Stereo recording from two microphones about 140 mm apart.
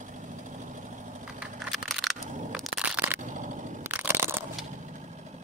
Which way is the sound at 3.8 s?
15° right (ahead or behind).